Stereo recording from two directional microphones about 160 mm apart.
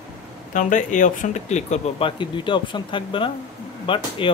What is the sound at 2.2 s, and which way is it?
Speech, 30° left (ahead or behind).